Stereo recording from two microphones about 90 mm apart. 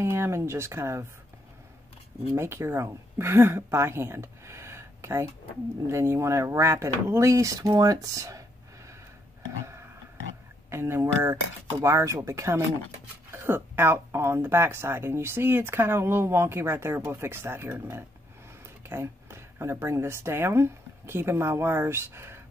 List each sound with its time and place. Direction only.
0.0 s speech: 30° right (ahead or behind)
2.3 s a woman's voice: 30° right (ahead or behind)
10.7 s speech: 30° right (ahead or behind)